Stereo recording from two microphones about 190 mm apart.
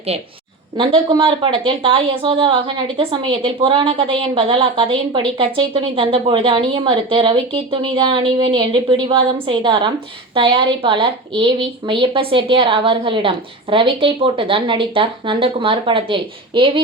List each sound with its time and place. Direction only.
0.8 s a woman's voice: 25° right (ahead or behind)